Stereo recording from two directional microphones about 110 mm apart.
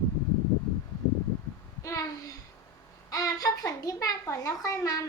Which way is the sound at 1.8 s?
30° left (ahead or behind).